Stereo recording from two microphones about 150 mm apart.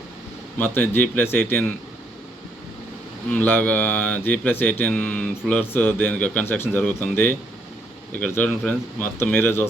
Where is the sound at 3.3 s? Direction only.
10° left (ahead or behind).